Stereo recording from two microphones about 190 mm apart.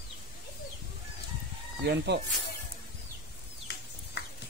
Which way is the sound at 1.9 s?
60° right (ahead or behind).